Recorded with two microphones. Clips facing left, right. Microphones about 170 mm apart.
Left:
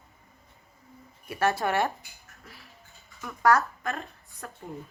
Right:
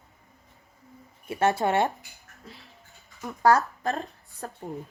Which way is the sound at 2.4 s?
20° right (ahead or behind).